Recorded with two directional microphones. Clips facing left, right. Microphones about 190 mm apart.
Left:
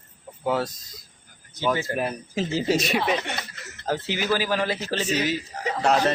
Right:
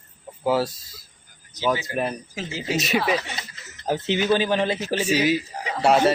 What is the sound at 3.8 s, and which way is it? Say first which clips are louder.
Speech: right 4 dB; 20° right (ahead or behind).